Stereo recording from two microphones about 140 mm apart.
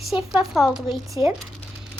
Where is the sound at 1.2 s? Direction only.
35° left (ahead or behind).